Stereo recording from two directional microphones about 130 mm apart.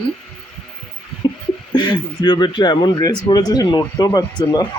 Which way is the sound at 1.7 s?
35° left (ahead or behind).